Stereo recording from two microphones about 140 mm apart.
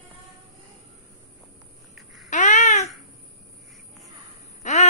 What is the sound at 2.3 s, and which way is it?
Babbling, 60° left (ahead or behind).